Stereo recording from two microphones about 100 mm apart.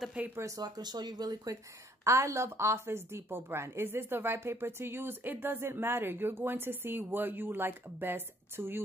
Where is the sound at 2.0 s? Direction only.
30° right (ahead or behind).